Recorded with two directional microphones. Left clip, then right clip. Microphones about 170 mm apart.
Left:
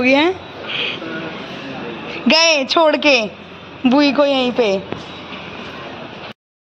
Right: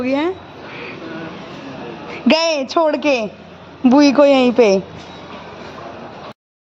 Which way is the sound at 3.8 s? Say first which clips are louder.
Right 3 dB; 40° right (ahead or behind).